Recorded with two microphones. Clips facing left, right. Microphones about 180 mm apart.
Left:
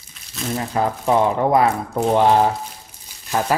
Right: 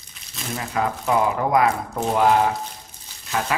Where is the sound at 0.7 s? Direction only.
30° left (ahead or behind).